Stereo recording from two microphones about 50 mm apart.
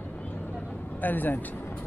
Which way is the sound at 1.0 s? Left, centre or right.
Left.